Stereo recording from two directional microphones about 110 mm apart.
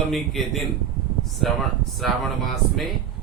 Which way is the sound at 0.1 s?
Centre (ahead or behind).